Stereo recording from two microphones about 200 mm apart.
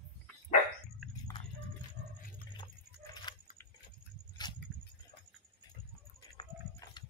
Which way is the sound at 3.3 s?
25° left (ahead or behind).